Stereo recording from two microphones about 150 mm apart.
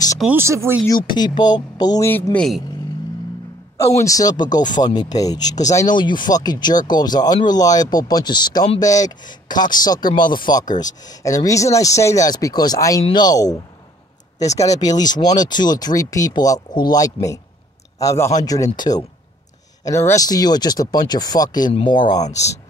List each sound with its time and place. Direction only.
0.2 s speech: 15° right (ahead or behind)
0.8 s speech: 30° left (ahead or behind)
2.0 s speech: 15° left (ahead or behind)
3.7 s speech: 20° left (ahead or behind)